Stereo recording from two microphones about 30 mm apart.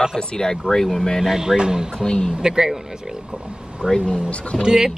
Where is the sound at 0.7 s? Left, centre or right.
Centre.